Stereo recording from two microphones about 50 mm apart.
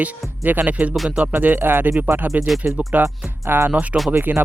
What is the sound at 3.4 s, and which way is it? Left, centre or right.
Speech, right.